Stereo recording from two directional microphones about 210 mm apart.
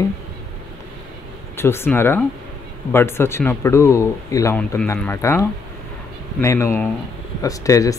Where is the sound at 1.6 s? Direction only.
10° left (ahead or behind).